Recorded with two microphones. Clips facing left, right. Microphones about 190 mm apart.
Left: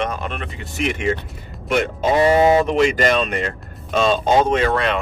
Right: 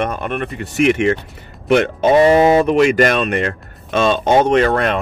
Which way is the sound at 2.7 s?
60° right (ahead or behind).